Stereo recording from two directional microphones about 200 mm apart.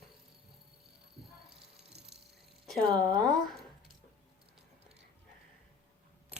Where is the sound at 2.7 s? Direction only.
5° left (ahead or behind).